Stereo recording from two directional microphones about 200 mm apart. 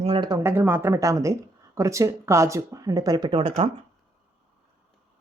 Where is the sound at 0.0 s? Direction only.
25° right (ahead or behind).